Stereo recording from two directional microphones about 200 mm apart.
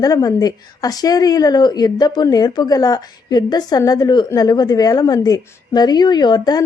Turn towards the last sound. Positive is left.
turn(degrees=20)  # may be behind; listen again after turning